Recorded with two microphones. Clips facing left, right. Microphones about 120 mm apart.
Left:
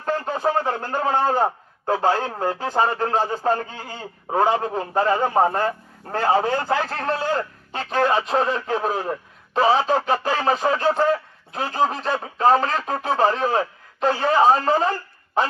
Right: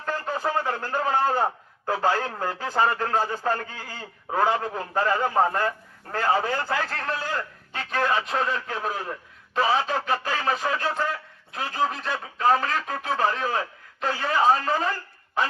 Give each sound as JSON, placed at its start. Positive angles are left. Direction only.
{"t": 0.0, "sound": "a man's voice", "side_deg": 25}